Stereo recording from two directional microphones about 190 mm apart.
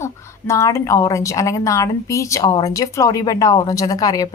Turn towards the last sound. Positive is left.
turn(degrees=20)  # may be behind; listen again after turning